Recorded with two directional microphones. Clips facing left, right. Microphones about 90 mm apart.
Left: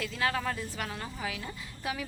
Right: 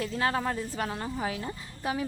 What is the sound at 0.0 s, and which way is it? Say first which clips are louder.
Speech: right 3 dB; 35° right (ahead or behind).